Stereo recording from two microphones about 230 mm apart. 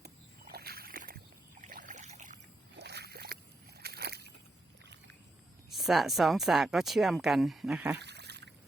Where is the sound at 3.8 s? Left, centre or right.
Right.